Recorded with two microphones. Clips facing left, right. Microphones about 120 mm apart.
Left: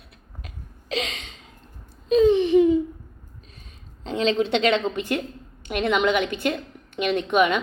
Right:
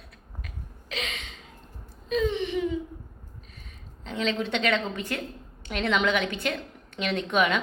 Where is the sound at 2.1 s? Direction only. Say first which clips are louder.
Left 10 dB; 30° left (ahead or behind).